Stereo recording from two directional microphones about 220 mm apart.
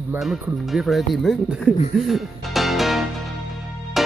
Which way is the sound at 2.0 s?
Centre (ahead or behind).